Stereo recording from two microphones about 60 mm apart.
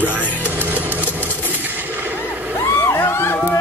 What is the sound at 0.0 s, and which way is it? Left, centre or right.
Music, right.